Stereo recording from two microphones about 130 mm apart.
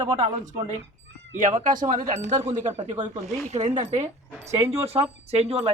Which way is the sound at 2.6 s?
65° right (ahead or behind).